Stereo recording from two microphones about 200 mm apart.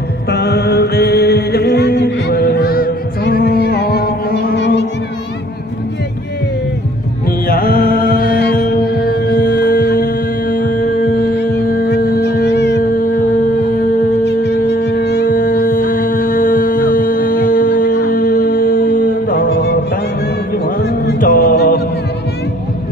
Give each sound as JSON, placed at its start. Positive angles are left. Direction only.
{"t": 0.3, "sound": "music", "side_deg": 55}
{"t": 7.4, "sound": "music", "side_deg": 50}
{"t": 11.9, "sound": "music", "side_deg": 55}
{"t": 14.2, "sound": "music", "side_deg": 60}